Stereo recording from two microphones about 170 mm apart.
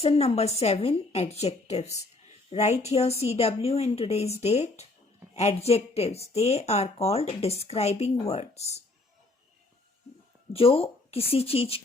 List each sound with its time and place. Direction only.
0.0 s speech: 35° left (ahead or behind)
10.5 s speech: 35° left (ahead or behind)